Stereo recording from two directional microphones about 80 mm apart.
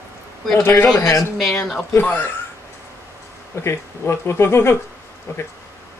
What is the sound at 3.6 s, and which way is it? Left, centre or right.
Speech, left.